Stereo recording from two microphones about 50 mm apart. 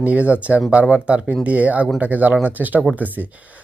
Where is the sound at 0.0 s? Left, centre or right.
Right.